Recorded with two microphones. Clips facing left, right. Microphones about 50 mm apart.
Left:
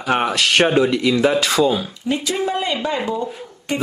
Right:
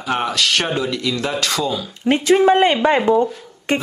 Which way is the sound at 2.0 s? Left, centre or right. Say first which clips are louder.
Right 10 dB; right.